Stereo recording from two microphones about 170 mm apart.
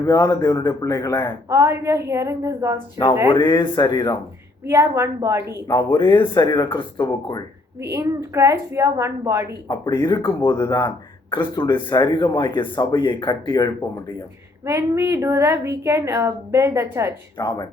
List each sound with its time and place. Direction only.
0.0 s speech: 20° left (ahead or behind)
1.5 s a woman's voice: 15° right (ahead or behind)
3.2 s speech: 25° left (ahead or behind)
4.6 s a woman's voice: 15° right (ahead or behind)
5.6 s speech: 20° left (ahead or behind)
7.8 s a woman's voice: 15° right (ahead or behind)
9.6 s speech: 25° left (ahead or behind)
14.6 s a woman's voice: 15° right (ahead or behind)
17.3 s speech: 20° left (ahead or behind)